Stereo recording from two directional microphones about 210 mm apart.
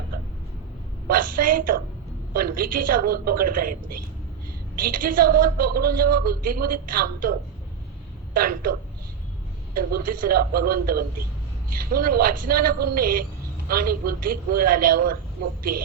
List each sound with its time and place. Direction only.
1.0 s a sound: 40° right (ahead or behind)
2.3 s a woman's voice: 45° right (ahead or behind)
4.8 s a woman's voice: 40° right (ahead or behind)
9.7 s a woman's voice: 40° right (ahead or behind)